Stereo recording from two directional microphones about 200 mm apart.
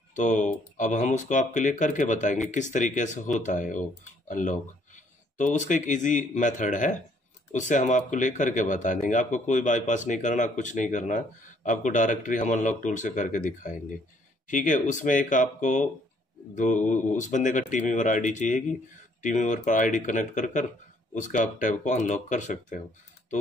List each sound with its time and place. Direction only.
0.1 s speech: 40° left (ahead or behind)